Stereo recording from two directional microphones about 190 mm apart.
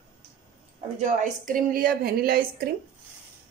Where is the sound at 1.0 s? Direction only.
45° right (ahead or behind).